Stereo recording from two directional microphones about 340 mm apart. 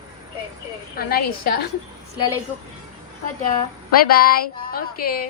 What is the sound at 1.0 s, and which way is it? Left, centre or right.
Speech, left.